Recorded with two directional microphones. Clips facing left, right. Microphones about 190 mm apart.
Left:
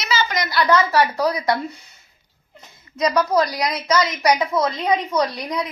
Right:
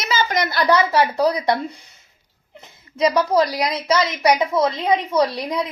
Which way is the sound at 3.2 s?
25° right (ahead or behind).